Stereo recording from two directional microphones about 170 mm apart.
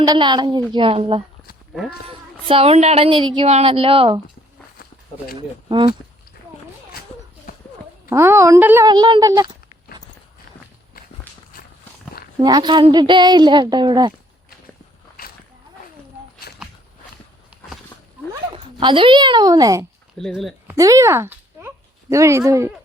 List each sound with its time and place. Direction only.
0.0 s a woman's voice: 25° right (ahead or behind)
5.6 s a woman's voice: 30° right (ahead or behind)
8.1 s a woman's voice: 15° right (ahead or behind)
8.9 s a woman's voice: 25° right (ahead or behind)
12.4 s a woman's voice: 25° right (ahead or behind)
18.5 s a child's voice: 30° right (ahead or behind)
20.1 s speech: centre (ahead or behind)
20.7 s a woman's voice: 20° right (ahead or behind)